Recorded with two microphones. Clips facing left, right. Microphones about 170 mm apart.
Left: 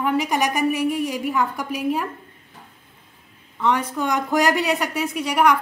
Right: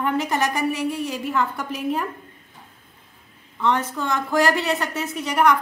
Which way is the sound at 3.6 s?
10° left (ahead or behind).